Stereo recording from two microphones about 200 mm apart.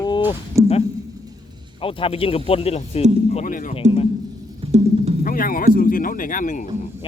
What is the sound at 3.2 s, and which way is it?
Speech, 40° left (ahead or behind).